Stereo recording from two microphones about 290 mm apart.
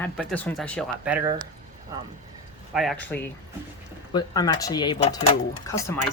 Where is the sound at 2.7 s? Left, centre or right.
Centre.